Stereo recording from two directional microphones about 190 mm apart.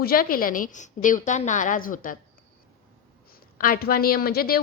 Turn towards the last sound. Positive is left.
turn(degrees=50)  # may be behind; listen again after turning